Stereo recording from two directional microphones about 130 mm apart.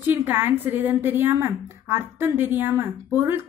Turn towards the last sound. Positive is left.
turn(degrees=-20)  # may be behind; listen again after turning